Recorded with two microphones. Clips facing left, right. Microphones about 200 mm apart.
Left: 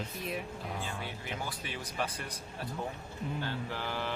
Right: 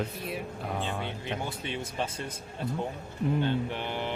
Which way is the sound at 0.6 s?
60° right (ahead or behind).